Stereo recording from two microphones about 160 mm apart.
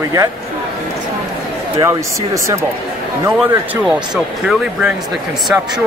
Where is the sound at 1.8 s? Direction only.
20° right (ahead or behind).